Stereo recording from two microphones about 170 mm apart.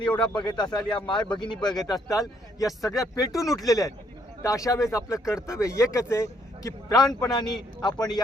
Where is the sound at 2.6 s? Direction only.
Centre (ahead or behind).